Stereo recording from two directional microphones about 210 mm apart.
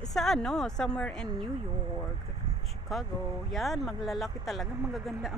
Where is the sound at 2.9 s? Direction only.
Centre (ahead or behind).